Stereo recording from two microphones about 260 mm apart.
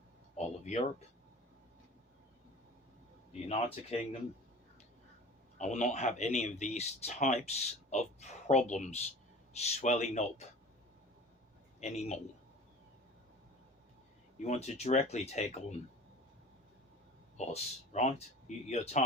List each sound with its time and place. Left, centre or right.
0.3 s a sound: left
3.5 s speech: left
5.5 s speech: left
11.8 s speech: left
14.3 s speech: left
17.3 s speech: left